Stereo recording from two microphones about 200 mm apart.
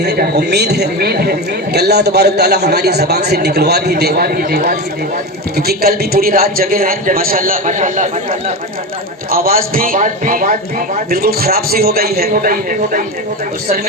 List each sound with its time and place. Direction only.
0.0 s a man's voice: 55° right (ahead or behind)